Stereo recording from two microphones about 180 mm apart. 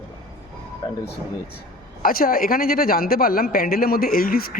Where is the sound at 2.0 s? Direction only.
55° left (ahead or behind).